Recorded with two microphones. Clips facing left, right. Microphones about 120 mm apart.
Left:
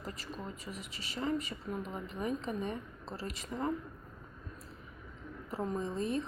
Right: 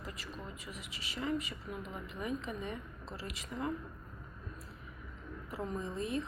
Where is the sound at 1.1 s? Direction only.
30° left (ahead or behind).